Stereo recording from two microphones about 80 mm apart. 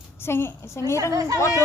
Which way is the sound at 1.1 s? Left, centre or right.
Right.